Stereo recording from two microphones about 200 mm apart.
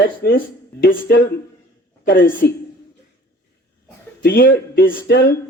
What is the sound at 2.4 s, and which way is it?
Speech, 55° left (ahead or behind).